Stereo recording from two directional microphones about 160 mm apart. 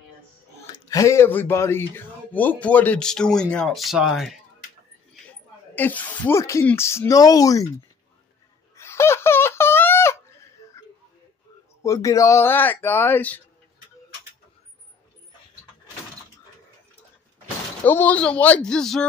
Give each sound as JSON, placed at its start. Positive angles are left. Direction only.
{"t": 0.7, "sound": "speech", "side_deg": 20}
{"t": 5.8, "sound": "speech", "side_deg": 10}
{"t": 8.7, "sound": "a sound", "side_deg": 15}
{"t": 11.8, "sound": "speech", "side_deg": 20}
{"t": 17.8, "sound": "speech", "side_deg": 10}